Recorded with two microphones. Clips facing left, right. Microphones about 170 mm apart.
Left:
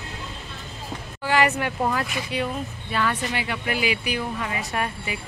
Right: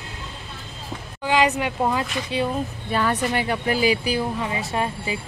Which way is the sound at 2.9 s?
40° right (ahead or behind).